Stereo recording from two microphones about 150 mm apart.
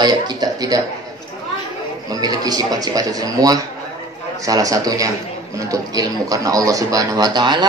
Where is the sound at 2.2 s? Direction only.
25° right (ahead or behind).